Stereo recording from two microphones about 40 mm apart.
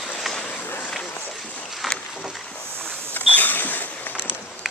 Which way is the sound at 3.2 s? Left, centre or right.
Left.